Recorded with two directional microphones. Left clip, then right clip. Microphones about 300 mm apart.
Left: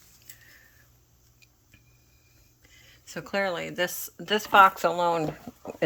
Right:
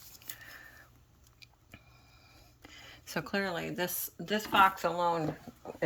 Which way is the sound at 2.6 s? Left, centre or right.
Centre.